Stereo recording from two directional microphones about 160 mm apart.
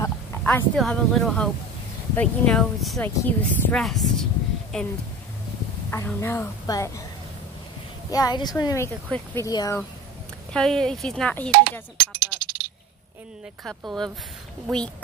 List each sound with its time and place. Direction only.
0.4 s a sound: 10° left (ahead or behind)
0.7 s speech: centre (ahead or behind); by 6.9 s 20° left (ahead or behind)
8.1 s speech: 25° left (ahead or behind)
10.5 s speech: 5° left (ahead or behind)
12.0 s a sound: 75° right (ahead or behind)
13.7 s speech: centre (ahead or behind)